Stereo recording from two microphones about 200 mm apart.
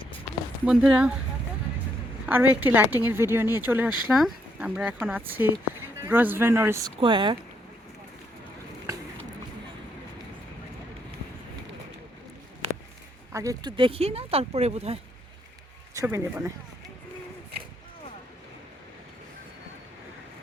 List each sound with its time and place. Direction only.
0.6 s speech: 5° right (ahead or behind)
2.2 s a woman's voice: 10° right (ahead or behind)
13.3 s speech: 15° right (ahead or behind)
16.0 s a woman's voice: 10° right (ahead or behind)